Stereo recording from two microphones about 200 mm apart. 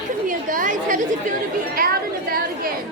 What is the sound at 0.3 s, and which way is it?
Chatter, 40° right (ahead or behind).